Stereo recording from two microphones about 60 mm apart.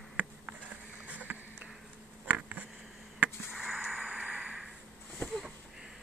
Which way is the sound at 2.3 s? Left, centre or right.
Right.